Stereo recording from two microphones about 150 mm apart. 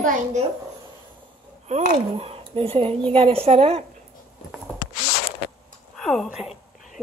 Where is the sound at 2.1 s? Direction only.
40° right (ahead or behind).